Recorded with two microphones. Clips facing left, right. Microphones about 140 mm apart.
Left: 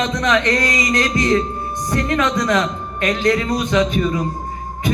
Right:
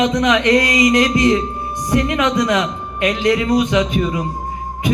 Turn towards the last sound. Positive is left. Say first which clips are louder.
# even
turn(degrees=-20)  # may be behind; listen again after turning